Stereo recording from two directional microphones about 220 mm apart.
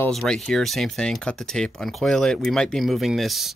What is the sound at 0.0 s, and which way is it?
Speech, 5° left (ahead or behind).